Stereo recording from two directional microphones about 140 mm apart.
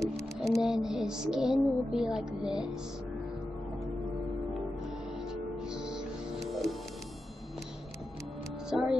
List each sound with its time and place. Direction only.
0.0 s music: centre (ahead or behind)
5.3 s music: 5° right (ahead or behind)
8.6 s speech: 5° right (ahead or behind)